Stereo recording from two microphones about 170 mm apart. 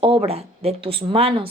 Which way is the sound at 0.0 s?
35° right (ahead or behind).